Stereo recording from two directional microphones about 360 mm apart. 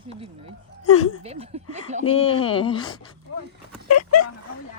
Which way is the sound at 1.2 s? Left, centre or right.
Centre.